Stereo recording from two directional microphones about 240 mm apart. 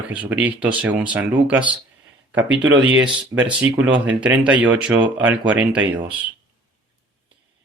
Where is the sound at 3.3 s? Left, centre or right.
Centre.